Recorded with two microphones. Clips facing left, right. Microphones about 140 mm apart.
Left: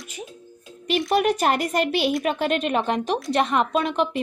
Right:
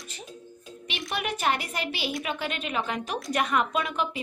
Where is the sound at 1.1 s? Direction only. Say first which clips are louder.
Left 7 dB; 40° left (ahead or behind).